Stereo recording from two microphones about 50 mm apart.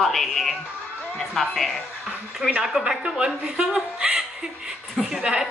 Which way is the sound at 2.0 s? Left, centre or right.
Centre.